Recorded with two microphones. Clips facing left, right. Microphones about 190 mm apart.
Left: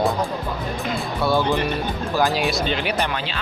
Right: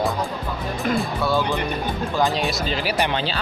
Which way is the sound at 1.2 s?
15° left (ahead or behind).